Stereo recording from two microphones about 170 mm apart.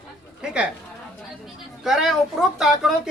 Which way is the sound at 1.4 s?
Centre (ahead or behind).